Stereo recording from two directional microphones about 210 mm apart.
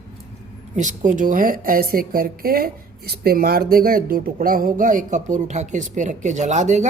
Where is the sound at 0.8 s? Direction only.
35° right (ahead or behind).